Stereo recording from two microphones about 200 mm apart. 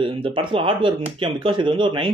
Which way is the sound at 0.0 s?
25° right (ahead or behind).